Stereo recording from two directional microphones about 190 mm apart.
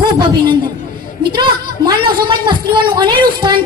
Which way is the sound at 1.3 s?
25° right (ahead or behind).